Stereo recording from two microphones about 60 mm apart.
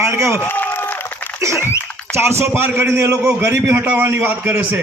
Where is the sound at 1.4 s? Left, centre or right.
Right.